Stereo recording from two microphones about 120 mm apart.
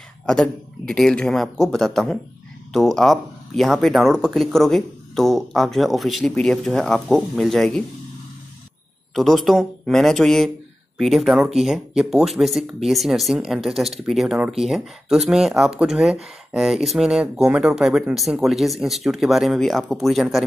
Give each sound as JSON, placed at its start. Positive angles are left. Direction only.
{"t": 0.3, "sound": "speech", "side_deg": 5}
{"t": 9.1, "sound": "speech", "side_deg": 0}